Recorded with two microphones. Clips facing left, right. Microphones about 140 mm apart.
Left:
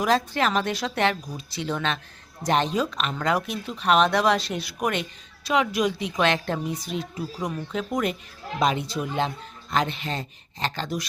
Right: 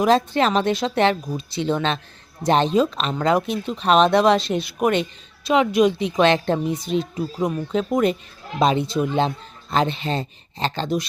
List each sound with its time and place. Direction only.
0.0 s speech: 25° right (ahead or behind)